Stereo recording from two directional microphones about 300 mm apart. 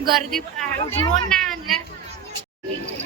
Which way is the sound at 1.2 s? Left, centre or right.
Centre.